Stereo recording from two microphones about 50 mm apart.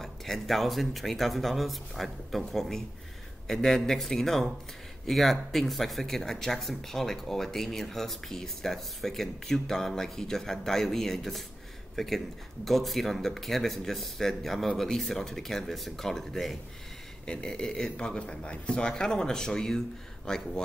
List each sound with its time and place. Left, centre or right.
0.0 s a man's voice: centre
17.3 s a man's voice: centre